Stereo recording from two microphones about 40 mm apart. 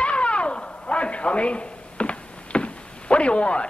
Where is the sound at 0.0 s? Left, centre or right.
Left.